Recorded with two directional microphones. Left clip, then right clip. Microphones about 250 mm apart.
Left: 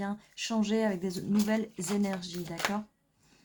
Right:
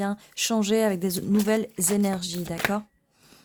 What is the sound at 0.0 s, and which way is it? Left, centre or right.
A woman's voice, right.